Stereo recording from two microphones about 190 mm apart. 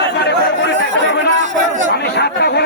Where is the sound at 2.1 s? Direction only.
60° left (ahead or behind).